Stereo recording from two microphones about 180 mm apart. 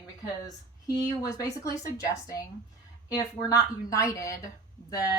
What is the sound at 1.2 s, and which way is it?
A woman's voice, 20° left (ahead or behind).